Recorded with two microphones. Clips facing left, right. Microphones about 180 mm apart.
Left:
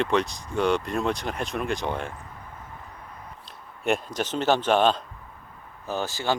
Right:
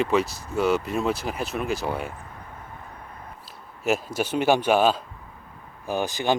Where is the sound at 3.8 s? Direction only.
5° right (ahead or behind).